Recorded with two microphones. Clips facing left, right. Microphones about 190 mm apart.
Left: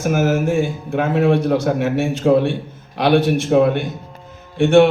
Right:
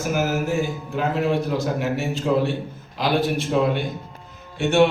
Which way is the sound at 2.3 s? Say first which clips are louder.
Left 6 dB; 75° left (ahead or behind).